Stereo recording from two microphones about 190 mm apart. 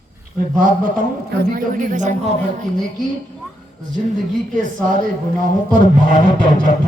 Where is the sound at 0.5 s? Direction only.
45° right (ahead or behind).